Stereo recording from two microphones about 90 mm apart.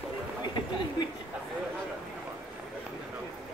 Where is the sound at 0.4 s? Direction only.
55° left (ahead or behind).